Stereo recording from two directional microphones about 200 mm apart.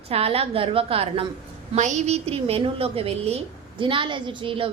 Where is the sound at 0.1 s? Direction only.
30° right (ahead or behind).